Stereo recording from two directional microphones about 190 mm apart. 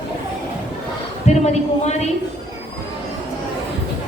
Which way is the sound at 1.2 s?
35° left (ahead or behind).